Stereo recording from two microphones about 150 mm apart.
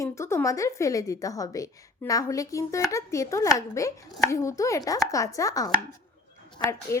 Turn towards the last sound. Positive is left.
turn(degrees=15)  # may be behind; listen again after turning